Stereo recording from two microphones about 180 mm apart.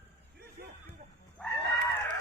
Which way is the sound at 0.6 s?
60° right (ahead or behind).